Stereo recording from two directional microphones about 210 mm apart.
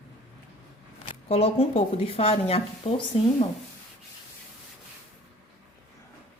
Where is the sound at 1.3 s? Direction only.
30° left (ahead or behind).